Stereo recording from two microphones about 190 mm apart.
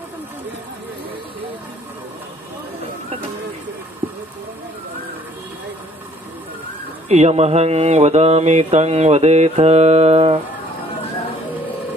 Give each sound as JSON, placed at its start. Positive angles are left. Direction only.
{"t": 7.1, "sound": "mantra", "side_deg": -35}